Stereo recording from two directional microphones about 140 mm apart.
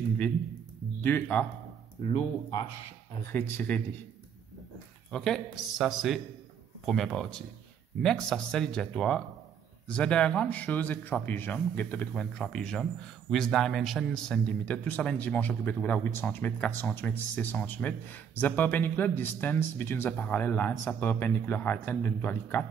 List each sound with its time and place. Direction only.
1.0 s speech: 10° left (ahead or behind)
2.0 s speech: 35° left (ahead or behind)
3.2 s speech: 15° left (ahead or behind)
5.1 s speech: 5° left (ahead or behind)